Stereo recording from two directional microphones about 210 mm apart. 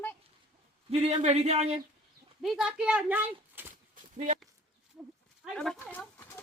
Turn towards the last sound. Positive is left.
turn(degrees=5)  # may be behind; listen again after turning